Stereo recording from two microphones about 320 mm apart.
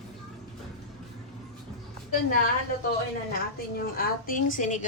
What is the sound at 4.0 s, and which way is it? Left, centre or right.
Speech, left.